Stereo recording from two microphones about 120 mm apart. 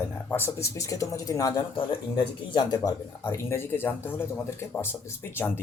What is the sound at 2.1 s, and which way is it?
Speech, 40° left (ahead or behind).